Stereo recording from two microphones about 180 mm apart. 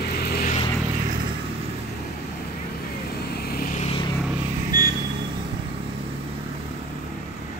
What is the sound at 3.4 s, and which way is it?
Vehicle, 55° left (ahead or behind).